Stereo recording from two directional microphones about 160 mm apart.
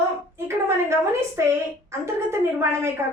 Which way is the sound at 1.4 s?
15° right (ahead or behind).